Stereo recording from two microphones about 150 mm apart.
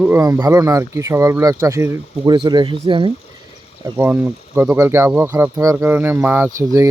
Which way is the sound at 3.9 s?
15° right (ahead or behind).